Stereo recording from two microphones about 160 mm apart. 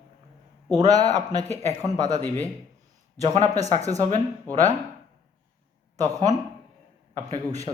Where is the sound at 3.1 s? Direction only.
20° right (ahead or behind).